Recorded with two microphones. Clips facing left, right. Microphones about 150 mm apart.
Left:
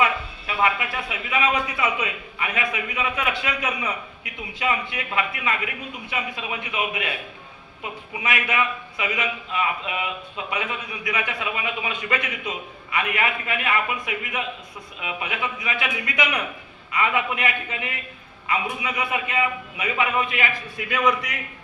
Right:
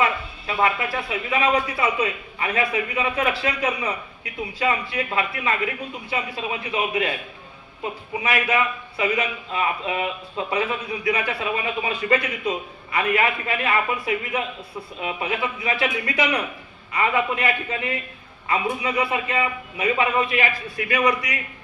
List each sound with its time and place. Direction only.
0.0 s a man's voice: 35° right (ahead or behind)